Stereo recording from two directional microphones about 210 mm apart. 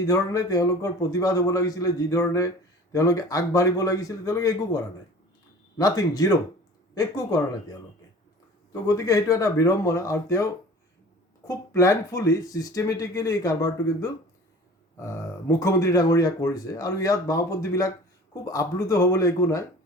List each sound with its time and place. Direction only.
0.0 s speech: 15° left (ahead or behind)
8.7 s speech: 15° left (ahead or behind)
11.4 s speech: 15° left (ahead or behind)